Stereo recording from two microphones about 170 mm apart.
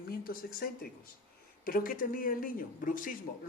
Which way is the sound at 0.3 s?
60° left (ahead or behind).